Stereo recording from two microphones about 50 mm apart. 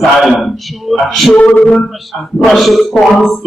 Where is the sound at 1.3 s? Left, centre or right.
Left.